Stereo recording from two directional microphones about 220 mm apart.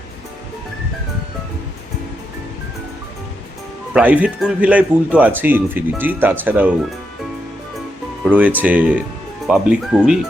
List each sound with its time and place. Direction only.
3.9 s speech: 5° right (ahead or behind)
8.3 s speech: 5° right (ahead or behind)